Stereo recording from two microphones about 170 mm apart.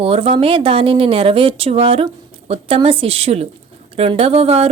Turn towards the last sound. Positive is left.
turn(degrees=-35)  # may be behind; listen again after turning